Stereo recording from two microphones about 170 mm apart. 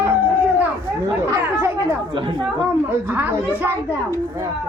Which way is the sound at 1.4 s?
15° right (ahead or behind).